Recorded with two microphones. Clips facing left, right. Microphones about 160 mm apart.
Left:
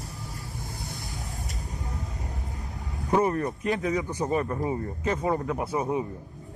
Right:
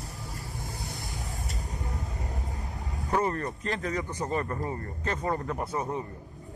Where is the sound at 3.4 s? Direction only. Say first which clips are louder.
Left 5 dB; 5° left (ahead or behind).